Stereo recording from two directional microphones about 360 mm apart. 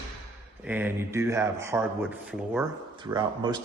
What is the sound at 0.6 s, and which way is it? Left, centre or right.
Speech, centre.